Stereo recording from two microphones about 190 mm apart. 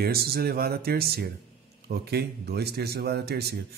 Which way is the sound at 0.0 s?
55° right (ahead or behind).